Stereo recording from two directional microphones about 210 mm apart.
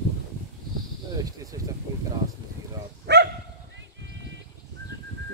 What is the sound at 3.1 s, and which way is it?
Dog, 55° right (ahead or behind).